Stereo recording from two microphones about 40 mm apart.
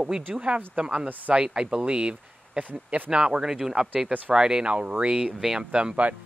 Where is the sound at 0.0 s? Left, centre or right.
Right.